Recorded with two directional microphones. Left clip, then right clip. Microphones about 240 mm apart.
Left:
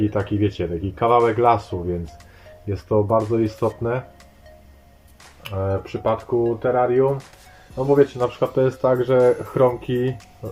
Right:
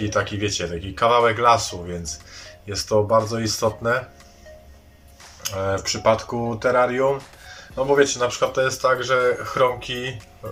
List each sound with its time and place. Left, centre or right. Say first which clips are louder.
0.1 s speech: even; centre
2.6 s speech: even; centre
5.4 s speech: right 1 dB; centre